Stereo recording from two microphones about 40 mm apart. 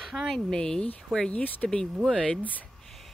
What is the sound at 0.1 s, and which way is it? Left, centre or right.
Speech, centre.